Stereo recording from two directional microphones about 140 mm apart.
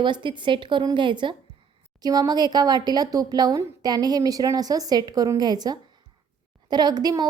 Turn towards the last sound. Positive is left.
turn(degrees=-30)  # may be behind; listen again after turning